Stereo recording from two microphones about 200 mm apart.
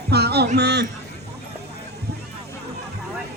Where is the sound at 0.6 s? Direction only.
55° right (ahead or behind).